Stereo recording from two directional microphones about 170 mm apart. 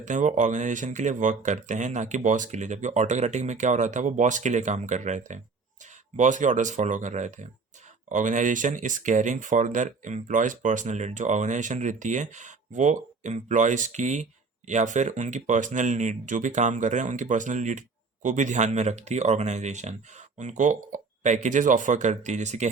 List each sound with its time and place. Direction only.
0.0 s speech: 50° right (ahead or behind)